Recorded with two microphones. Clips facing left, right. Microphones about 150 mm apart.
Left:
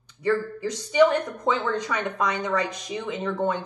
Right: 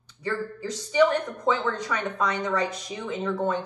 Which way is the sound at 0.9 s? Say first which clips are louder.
Left 2 dB; 15° left (ahead or behind).